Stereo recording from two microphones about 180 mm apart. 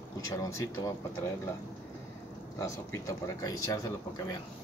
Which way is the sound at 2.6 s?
20° left (ahead or behind).